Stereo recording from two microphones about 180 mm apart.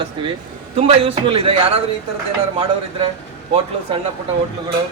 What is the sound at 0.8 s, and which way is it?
A man's voice, 35° right (ahead or behind).